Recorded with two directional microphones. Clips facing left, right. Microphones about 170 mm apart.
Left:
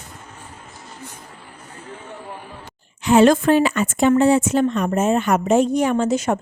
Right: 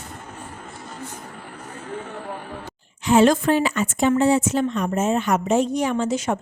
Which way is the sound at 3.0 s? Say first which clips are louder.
Left 3 dB; 60° left (ahead or behind).